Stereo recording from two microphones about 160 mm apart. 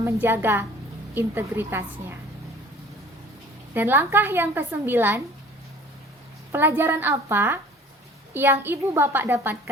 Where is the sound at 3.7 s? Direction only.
10° right (ahead or behind).